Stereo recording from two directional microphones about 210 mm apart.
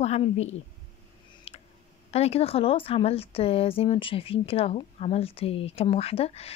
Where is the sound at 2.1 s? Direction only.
30° left (ahead or behind).